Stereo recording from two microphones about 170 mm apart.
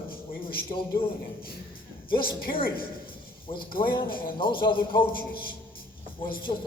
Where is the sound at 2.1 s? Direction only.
60° left (ahead or behind).